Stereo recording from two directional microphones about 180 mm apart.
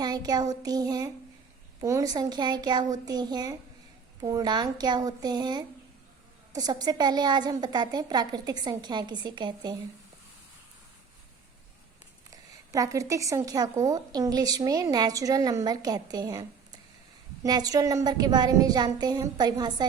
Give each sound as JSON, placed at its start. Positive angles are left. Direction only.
{"t": 0.0, "sound": "speech", "side_deg": -20}
{"t": 12.3, "sound": "speech", "side_deg": -20}